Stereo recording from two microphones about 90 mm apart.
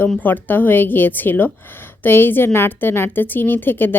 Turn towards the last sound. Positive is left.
turn(degrees=25)  # may be behind; listen again after turning